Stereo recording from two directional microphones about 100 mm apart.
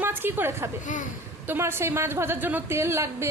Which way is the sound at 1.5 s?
25° right (ahead or behind).